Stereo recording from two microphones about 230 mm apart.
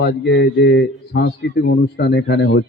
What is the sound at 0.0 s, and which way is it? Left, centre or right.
A man's voice, left.